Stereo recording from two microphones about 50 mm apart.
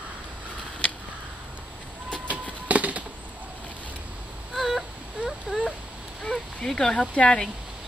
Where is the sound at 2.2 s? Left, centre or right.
Right.